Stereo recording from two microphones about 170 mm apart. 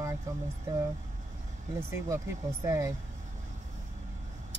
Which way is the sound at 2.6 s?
20° right (ahead or behind).